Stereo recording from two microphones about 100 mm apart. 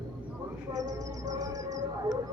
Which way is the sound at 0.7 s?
40° right (ahead or behind).